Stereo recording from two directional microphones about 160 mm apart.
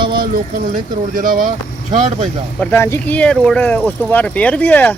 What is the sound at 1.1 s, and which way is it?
Speech, 55° right (ahead or behind).